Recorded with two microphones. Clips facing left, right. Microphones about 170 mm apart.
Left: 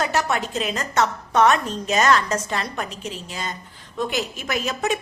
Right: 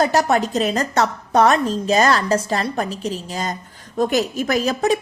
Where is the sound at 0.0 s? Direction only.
40° right (ahead or behind).